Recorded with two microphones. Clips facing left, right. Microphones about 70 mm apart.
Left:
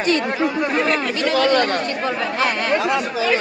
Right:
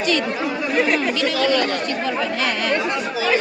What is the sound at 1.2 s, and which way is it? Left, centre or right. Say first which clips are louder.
Speech: left 6 dB; left.